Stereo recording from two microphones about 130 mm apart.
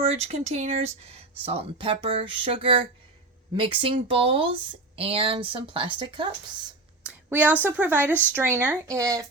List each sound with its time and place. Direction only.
0.0 s a woman's voice: 50° right (ahead or behind)
7.1 s a woman's voice: 15° right (ahead or behind)